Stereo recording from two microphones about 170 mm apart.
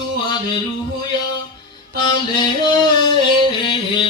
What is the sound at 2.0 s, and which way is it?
Mantra, 25° left (ahead or behind).